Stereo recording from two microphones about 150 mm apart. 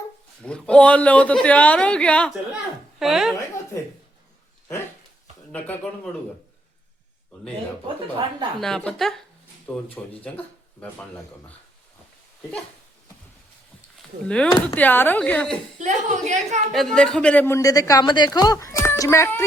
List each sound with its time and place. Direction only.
0.4 s speech: 5° left (ahead or behind)
5.5 s speech: 10° left (ahead or behind)
8.6 s speech: 5° left (ahead or behind)
14.3 s speech: 5° left (ahead or behind)
15.8 s a woman's voice: 50° right (ahead or behind)
16.7 s a man's voice: 5° left (ahead or behind)